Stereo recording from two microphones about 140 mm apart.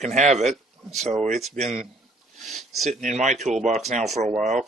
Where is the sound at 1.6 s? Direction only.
50° right (ahead or behind).